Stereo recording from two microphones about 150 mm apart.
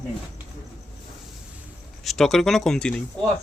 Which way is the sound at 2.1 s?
Centre (ahead or behind).